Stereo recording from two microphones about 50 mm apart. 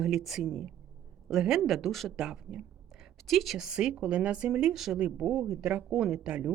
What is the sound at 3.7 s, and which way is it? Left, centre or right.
Speech, centre.